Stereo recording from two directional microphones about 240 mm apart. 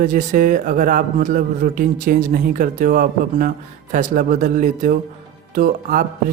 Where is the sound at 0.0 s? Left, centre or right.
Right.